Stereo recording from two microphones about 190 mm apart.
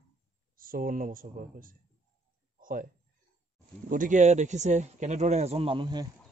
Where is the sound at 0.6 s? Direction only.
45° right (ahead or behind).